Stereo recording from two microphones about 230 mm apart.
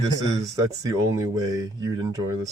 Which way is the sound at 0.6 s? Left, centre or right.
Centre.